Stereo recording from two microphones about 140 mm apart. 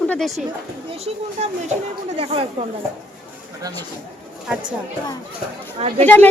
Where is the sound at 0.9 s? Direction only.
50° right (ahead or behind).